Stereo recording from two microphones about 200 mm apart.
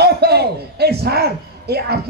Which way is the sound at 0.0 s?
55° right (ahead or behind).